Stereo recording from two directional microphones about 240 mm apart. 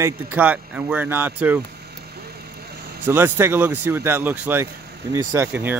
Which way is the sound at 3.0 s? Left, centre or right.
Centre.